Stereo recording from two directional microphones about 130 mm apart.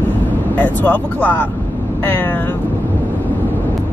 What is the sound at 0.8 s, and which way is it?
Speech, 15° left (ahead or behind).